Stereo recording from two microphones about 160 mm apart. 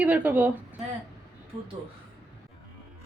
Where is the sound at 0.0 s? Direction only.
10° right (ahead or behind).